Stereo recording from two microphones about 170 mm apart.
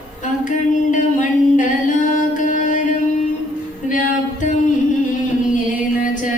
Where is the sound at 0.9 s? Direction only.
50° left (ahead or behind).